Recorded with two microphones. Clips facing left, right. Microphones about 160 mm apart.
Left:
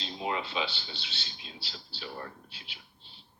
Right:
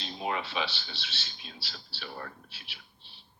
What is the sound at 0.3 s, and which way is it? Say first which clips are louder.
Speech: even; 20° left (ahead or behind).